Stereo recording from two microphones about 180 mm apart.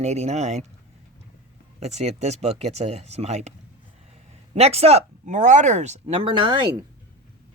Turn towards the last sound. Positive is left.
turn(degrees=-30)  # may be behind; listen again after turning